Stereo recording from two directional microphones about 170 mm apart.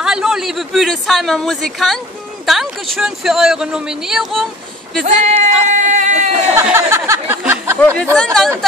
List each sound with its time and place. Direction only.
0.0 s a man's voice: 5° right (ahead or behind)
5.0 s speech: 45° right (ahead or behind)
6.5 s a sound: 15° right (ahead or behind)
8.2 s speech: 5° left (ahead or behind)